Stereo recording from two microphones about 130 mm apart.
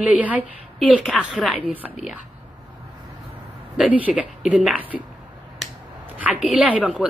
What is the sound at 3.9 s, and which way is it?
A woman's voice, 10° right (ahead or behind).